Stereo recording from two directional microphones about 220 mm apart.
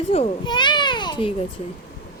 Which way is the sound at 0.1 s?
25° left (ahead or behind).